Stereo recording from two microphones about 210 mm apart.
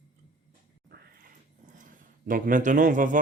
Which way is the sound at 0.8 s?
50° right (ahead or behind).